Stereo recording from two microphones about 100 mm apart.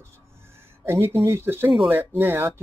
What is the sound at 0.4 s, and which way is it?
Speech, 25° right (ahead or behind).